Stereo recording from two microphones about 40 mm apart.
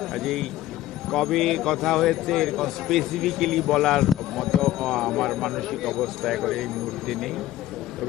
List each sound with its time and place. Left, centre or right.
0.0 s a man's voice: centre